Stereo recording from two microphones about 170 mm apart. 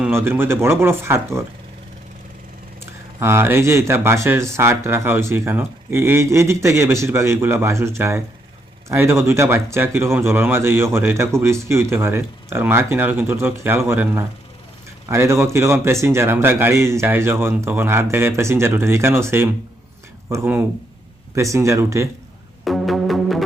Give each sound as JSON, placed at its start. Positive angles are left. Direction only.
{"t": 0.0, "sound": "speech", "side_deg": -15}
{"t": 2.8, "sound": "speech", "side_deg": -15}
{"t": 22.6, "sound": "music", "side_deg": 0}